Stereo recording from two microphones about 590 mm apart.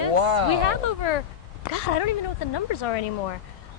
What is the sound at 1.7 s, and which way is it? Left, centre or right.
Speech, left.